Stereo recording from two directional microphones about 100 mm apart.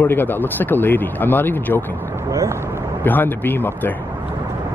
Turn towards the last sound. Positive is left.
turn(degrees=20)  # may be behind; listen again after turning